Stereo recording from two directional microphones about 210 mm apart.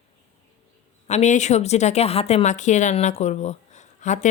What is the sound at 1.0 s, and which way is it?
Speech, 35° left (ahead or behind).